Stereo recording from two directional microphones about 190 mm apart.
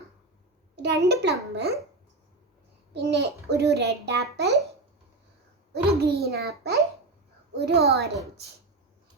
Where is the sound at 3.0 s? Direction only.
65° right (ahead or behind).